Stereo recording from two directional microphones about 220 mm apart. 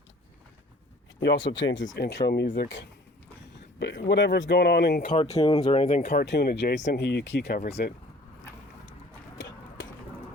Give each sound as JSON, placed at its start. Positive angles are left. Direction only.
{"t": 1.2, "sound": "speech", "side_deg": 55}
{"t": 5.1, "sound": "speech", "side_deg": 30}
{"t": 5.4, "sound": "speech", "side_deg": 20}
{"t": 5.9, "sound": "speech", "side_deg": 45}
{"t": 9.4, "sound": "a sound", "side_deg": 55}